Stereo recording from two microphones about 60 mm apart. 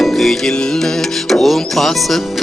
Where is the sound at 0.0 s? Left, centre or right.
Centre.